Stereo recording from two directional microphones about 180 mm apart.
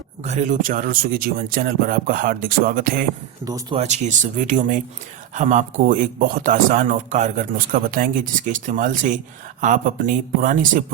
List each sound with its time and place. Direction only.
0.2 s speech: 40° right (ahead or behind)
3.4 s speech: 20° right (ahead or behind)
3.8 s speech: 40° right (ahead or behind)